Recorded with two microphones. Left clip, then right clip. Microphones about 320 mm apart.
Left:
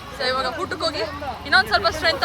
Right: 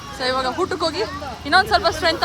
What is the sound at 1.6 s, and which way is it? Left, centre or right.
Speech, right.